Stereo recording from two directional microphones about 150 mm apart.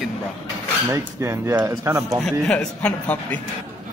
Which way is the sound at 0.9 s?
20° right (ahead or behind).